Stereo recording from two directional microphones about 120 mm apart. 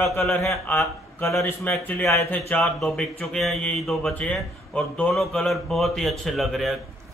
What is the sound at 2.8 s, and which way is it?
Speech, 5° left (ahead or behind).